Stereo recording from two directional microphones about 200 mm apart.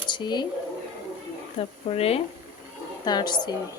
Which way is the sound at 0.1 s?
20° left (ahead or behind).